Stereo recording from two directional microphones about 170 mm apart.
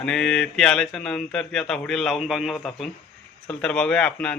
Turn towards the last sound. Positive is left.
turn(degrees=5)  # may be behind; listen again after turning